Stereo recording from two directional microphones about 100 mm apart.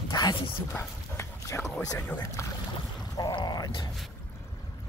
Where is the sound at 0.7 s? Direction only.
25° left (ahead or behind).